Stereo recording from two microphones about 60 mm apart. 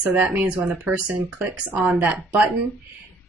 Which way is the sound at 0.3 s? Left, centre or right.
Right.